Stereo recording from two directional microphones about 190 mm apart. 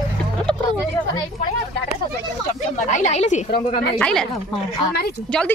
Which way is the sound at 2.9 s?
35° left (ahead or behind).